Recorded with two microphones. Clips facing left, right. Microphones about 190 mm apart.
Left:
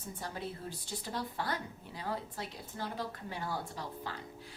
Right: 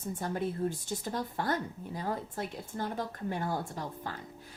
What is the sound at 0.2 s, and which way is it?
Speech, 50° right (ahead or behind).